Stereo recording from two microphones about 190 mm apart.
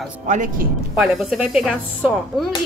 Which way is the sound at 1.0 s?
5° right (ahead or behind).